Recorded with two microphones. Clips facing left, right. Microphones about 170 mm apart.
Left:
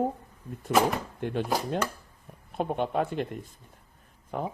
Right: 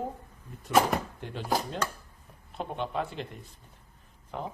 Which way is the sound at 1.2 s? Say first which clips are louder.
Left 9 dB; 55° left (ahead or behind).